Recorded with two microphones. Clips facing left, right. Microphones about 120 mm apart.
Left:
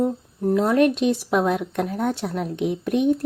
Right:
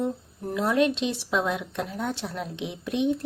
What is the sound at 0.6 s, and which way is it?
A woman's voice, 50° left (ahead or behind).